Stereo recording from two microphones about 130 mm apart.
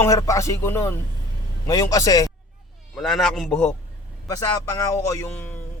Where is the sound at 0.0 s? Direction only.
25° left (ahead or behind).